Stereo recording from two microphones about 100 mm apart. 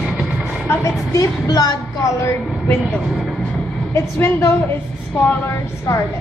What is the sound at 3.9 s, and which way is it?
A woman's voice, 25° left (ahead or behind).